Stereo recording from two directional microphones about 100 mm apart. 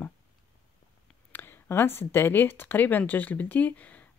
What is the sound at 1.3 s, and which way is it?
Speech, 20° left (ahead or behind).